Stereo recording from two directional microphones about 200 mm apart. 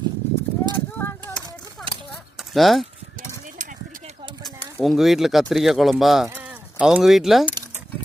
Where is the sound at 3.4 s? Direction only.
40° right (ahead or behind).